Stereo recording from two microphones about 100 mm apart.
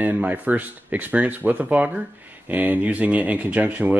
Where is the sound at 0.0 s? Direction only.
15° right (ahead or behind).